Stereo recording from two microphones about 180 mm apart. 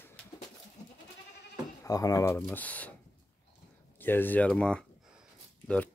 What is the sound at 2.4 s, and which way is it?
Speech, 10° left (ahead or behind).